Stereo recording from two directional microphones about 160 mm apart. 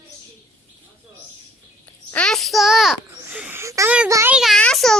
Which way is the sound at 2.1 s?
5° left (ahead or behind).